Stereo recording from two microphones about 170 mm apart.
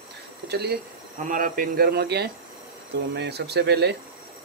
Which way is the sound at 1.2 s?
55° right (ahead or behind).